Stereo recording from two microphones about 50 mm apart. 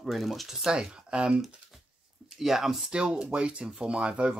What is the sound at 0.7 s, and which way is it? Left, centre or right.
Speech, centre.